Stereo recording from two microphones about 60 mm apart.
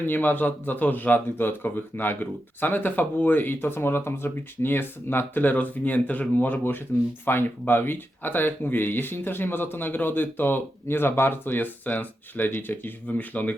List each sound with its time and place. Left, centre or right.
0.0 s speech: left